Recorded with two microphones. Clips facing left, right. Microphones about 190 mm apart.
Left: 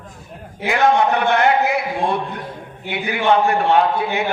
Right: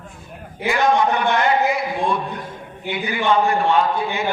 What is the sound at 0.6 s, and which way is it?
A man's voice, 60° left (ahead or behind).